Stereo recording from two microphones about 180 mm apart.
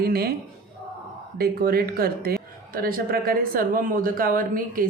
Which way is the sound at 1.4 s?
60° right (ahead or behind).